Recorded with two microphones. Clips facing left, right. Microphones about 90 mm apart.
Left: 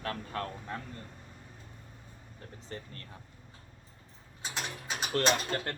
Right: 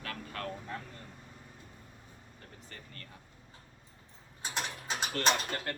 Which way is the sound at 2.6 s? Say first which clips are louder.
Left 10 dB; 30° left (ahead or behind).